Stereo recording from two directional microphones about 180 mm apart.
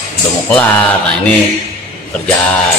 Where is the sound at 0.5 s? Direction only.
10° left (ahead or behind).